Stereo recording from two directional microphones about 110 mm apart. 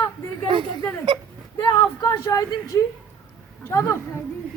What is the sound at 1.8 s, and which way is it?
A woman's voice, 30° left (ahead or behind).